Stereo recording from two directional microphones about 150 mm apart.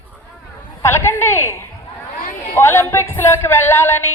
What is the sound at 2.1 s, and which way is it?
Chatter, 70° left (ahead or behind).